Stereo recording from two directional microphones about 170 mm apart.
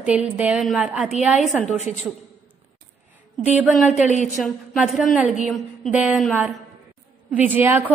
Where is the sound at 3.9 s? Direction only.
45° left (ahead or behind).